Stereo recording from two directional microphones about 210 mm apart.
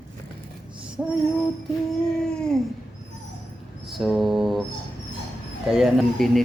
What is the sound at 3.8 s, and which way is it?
Speech, centre (ahead or behind).